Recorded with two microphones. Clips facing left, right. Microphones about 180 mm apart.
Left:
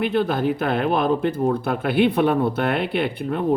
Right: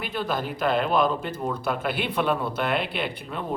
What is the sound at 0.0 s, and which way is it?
Speech, 55° left (ahead or behind).